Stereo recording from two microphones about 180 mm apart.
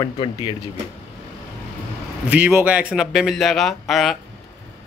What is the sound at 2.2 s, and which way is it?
A man's voice, 10° right (ahead or behind).